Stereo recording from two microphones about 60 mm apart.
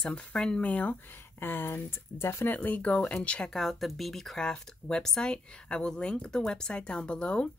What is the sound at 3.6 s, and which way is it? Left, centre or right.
Speech, centre.